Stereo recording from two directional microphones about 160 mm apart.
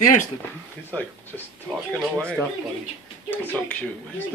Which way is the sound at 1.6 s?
15° right (ahead or behind).